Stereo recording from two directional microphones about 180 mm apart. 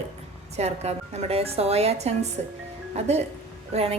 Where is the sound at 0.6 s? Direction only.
35° right (ahead or behind).